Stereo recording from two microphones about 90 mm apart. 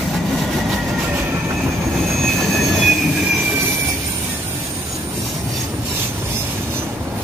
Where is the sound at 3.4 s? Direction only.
20° right (ahead or behind).